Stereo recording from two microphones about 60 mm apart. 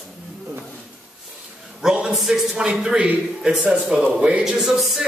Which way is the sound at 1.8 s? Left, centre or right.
Centre.